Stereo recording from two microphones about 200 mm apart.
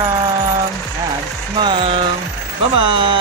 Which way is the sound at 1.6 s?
25° right (ahead or behind).